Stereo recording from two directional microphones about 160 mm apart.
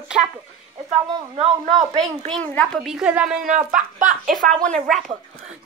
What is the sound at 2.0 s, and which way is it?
A woman's voice, 5° left (ahead or behind).